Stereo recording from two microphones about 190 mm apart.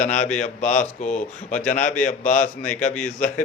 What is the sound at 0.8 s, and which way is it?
Speech, 40° left (ahead or behind).